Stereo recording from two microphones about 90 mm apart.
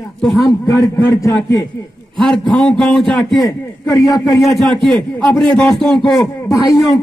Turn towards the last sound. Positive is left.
turn(degrees=40)  # may be behind; listen again after turning